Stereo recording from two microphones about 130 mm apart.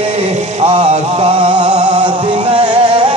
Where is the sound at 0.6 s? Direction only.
50° right (ahead or behind).